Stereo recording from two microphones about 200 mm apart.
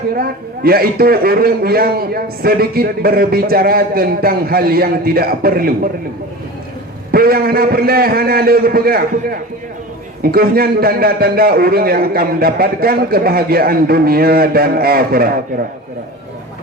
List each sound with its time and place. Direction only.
0.1 s a man's voice: 50° right (ahead or behind)
7.1 s a man's voice: 50° right (ahead or behind)